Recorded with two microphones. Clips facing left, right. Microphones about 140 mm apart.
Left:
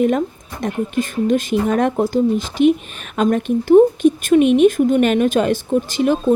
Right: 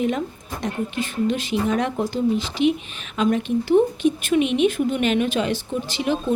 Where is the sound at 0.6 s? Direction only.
45° left (ahead or behind).